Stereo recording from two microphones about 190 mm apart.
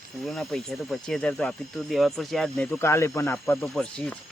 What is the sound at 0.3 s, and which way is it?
Speech, centre (ahead or behind).